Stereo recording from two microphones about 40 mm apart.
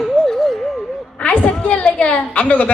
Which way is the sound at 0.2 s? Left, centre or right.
Centre.